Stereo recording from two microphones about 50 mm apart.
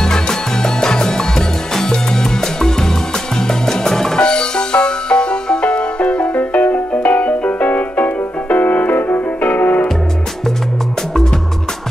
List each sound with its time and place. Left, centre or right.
0.0 s music: centre
6.3 s music: left